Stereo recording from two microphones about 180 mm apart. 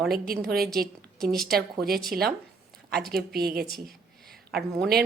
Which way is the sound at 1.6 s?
60° right (ahead or behind).